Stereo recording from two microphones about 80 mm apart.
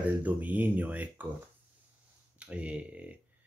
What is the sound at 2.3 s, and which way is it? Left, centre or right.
Speech, centre.